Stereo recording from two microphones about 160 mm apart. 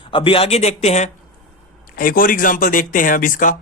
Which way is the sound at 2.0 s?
60° left (ahead or behind).